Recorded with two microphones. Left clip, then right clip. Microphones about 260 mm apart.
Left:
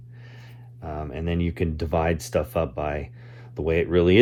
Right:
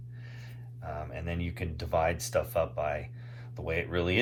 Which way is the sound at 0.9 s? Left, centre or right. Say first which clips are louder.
Left 7 dB; left.